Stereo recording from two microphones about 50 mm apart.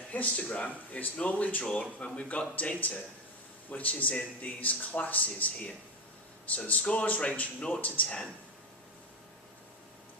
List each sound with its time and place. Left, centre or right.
0.1 s speech: left